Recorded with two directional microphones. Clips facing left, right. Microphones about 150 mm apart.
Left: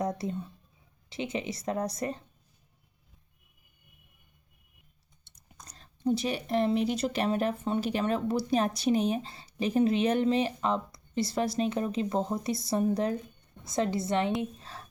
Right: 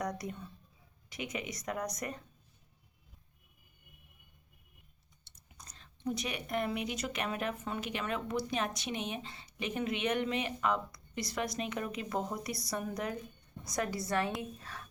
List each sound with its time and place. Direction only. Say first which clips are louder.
0.0 s speech: left 6 dB; 25° left (ahead or behind)
6.1 s a woman's voice: left 8 dB; 30° left (ahead or behind)
14.6 s a sound: left 2 dB; 30° left (ahead or behind)